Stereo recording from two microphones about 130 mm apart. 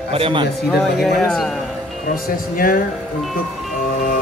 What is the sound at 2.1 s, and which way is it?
Speech, 90° left.